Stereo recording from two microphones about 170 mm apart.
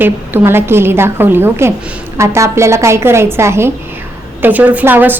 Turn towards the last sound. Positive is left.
turn(degrees=-10)  # may be behind; listen again after turning